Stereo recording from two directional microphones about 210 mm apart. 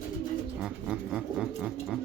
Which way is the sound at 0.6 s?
5° right (ahead or behind).